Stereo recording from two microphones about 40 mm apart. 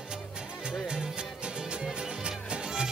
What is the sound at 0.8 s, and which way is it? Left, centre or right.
Music, right.